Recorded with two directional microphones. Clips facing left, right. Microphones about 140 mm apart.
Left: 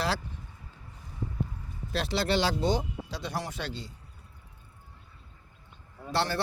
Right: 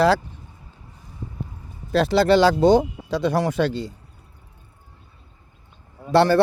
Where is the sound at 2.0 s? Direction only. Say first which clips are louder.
Right 11 dB; 45° right (ahead or behind).